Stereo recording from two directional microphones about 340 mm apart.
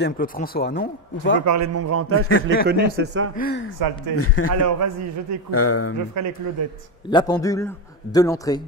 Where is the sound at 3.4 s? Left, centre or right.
Left.